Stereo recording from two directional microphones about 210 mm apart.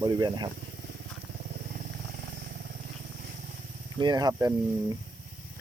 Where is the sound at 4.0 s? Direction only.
20° right (ahead or behind).